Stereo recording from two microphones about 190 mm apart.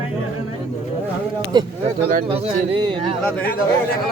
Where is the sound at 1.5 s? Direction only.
20° right (ahead or behind).